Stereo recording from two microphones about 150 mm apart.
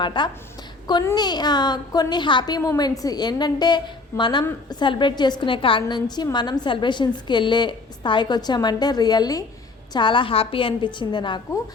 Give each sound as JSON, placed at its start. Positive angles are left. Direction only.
{"t": 0.0, "sound": "a woman's voice", "side_deg": 30}